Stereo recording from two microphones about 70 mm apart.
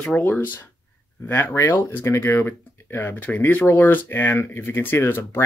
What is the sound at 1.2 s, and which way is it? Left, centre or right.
Speech, left.